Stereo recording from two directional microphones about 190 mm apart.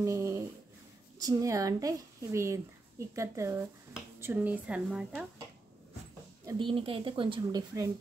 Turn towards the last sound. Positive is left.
turn(degrees=-20)  # may be behind; listen again after turning